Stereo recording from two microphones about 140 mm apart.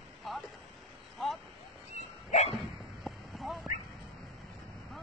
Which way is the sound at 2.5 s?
Centre (ahead or behind).